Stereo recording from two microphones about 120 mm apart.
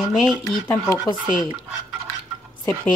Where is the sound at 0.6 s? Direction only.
25° left (ahead or behind).